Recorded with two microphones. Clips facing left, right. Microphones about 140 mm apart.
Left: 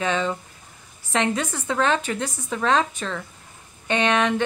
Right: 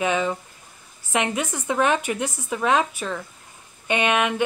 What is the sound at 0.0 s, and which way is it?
A woman's voice, 10° right (ahead or behind).